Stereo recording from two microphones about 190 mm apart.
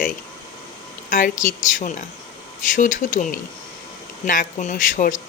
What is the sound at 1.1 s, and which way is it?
Speech, 45° left (ahead or behind).